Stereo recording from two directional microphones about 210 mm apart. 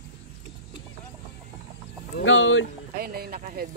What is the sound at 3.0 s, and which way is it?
Speech, 45° right (ahead or behind).